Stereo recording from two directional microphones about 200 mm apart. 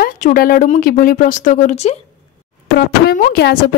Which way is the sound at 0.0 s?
45° left (ahead or behind).